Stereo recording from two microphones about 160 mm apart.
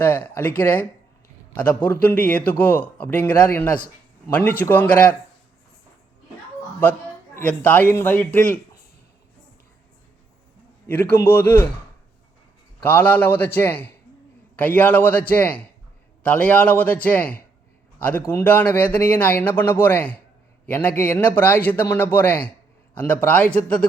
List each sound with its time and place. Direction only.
0.0 s a man's voice: 10° left (ahead or behind)
7.3 s a man's voice: 10° left (ahead or behind)
10.8 s a man's voice: 10° left (ahead or behind)
12.8 s a man's voice: 10° left (ahead or behind)